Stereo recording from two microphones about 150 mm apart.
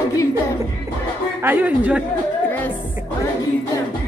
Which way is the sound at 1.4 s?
10° right (ahead or behind).